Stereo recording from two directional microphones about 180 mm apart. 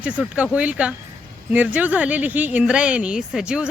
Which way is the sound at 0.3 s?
5° right (ahead or behind).